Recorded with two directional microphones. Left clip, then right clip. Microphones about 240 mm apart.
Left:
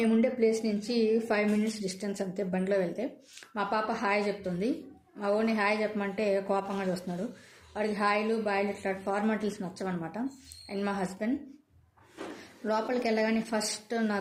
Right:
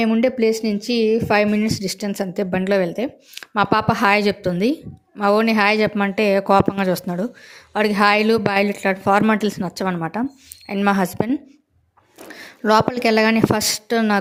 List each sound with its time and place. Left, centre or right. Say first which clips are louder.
0.0 s a woman's voice: right 9 dB; right
12.6 s a woman's voice: right 13 dB; right